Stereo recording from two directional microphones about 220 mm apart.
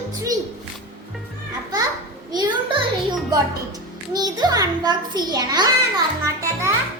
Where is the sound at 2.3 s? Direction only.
20° right (ahead or behind).